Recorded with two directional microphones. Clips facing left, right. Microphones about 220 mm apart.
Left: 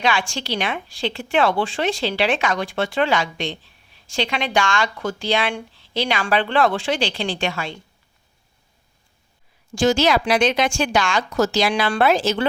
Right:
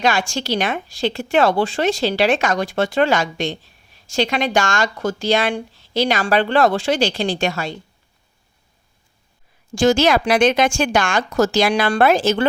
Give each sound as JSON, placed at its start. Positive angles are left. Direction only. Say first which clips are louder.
{"t": 0.0, "sound": "speech", "louder": "right 3 dB", "side_deg": -45}
{"t": 9.7, "sound": "speech", "louder": "right 2 dB", "side_deg": -50}